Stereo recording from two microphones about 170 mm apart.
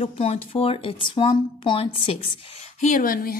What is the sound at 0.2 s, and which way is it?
Speech, 35° left (ahead or behind).